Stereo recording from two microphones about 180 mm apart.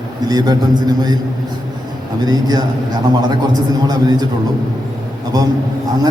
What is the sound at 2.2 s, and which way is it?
Speech, 20° right (ahead or behind).